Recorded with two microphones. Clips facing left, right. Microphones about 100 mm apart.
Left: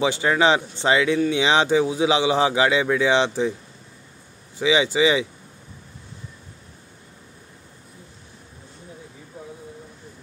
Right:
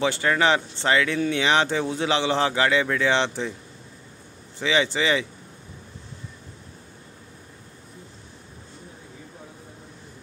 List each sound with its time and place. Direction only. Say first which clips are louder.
0.0 s speech: left 2 dB; 15° left (ahead or behind)
4.6 s speech: left 4 dB; 15° left (ahead or behind)